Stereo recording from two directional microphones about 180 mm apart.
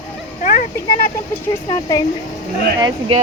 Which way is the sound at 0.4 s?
45° left (ahead or behind).